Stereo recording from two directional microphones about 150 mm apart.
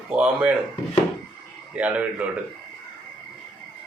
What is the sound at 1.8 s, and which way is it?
Speech, 10° right (ahead or behind).